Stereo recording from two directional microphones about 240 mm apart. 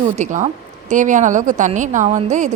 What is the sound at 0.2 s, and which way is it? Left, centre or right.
A woman's voice, right.